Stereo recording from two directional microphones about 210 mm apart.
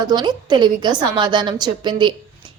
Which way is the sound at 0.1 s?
20° right (ahead or behind).